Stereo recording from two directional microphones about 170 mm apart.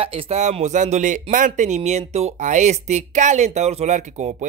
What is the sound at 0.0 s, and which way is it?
Speech, 35° right (ahead or behind).